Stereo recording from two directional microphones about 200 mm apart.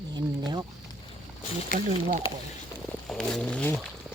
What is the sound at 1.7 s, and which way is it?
Speech, 40° right (ahead or behind).